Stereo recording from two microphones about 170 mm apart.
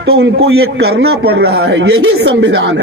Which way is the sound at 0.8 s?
70° right (ahead or behind).